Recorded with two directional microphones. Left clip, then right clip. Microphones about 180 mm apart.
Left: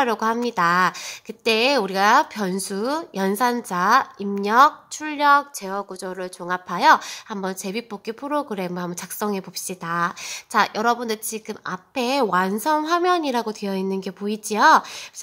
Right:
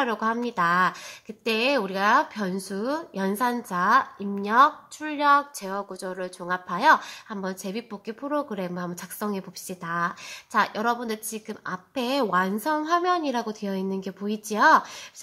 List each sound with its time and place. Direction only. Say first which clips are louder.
0.0 s speech: left 5 dB; 30° left (ahead or behind)